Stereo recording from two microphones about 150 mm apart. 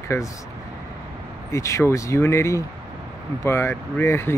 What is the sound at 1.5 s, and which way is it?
Speech, 20° left (ahead or behind).